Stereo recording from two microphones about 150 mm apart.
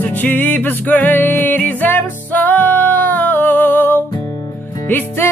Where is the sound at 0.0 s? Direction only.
10° left (ahead or behind).